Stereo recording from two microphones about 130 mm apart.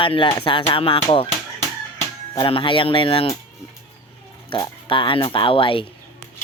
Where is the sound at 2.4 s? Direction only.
40° left (ahead or behind).